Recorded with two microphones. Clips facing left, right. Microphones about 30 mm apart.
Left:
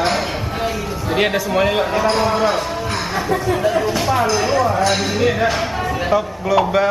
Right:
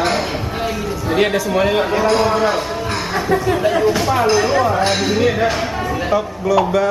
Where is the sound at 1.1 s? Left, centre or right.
Centre.